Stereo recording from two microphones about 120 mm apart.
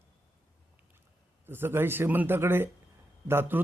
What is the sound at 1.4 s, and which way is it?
A man's voice, 20° right (ahead or behind).